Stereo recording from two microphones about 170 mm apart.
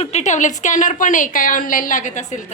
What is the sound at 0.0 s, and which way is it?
A woman's voice, 40° left (ahead or behind).